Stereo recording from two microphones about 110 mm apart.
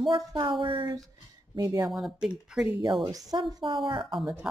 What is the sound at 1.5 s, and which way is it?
Speech, 35° right (ahead or behind).